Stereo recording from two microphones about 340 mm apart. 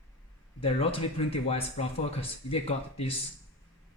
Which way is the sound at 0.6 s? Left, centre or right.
Centre.